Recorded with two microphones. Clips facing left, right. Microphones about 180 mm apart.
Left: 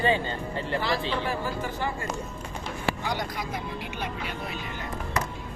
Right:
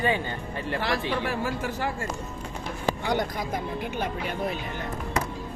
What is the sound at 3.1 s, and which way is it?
Speech, 50° right (ahead or behind).